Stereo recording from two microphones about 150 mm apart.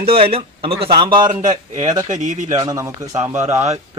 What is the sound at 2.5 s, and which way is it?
Speech, 25° right (ahead or behind).